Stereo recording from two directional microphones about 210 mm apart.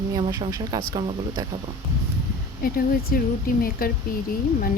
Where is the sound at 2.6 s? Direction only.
45° left (ahead or behind).